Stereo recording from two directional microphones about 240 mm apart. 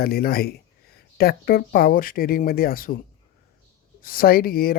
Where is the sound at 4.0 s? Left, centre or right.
Left.